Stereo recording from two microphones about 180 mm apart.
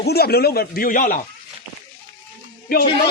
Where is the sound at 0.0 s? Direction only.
60° left (ahead or behind).